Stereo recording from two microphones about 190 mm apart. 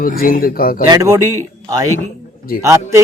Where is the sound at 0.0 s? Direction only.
50° left (ahead or behind).